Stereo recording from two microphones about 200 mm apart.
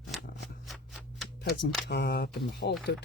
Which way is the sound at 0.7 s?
Centre (ahead or behind).